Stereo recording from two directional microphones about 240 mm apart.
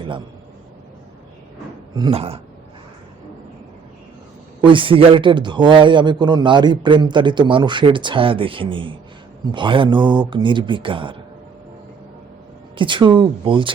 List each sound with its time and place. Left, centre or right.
2.0 s a man's voice: right
4.6 s a man's voice: right
12.7 s a man's voice: right